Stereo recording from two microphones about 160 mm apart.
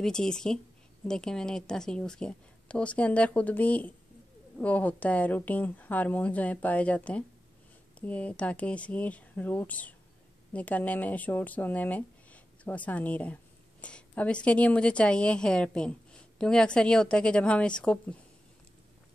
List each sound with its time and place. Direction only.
0.0 s speech: 5° left (ahead or behind)